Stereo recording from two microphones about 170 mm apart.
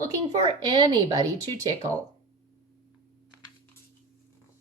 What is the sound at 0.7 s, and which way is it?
Speech, 30° right (ahead or behind).